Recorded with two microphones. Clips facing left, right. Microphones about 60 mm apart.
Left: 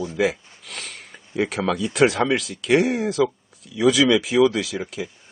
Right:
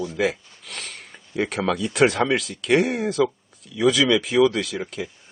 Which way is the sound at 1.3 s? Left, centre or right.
Centre.